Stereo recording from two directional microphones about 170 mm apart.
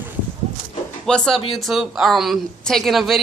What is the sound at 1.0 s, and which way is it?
A woman's voice, 5° left (ahead or behind).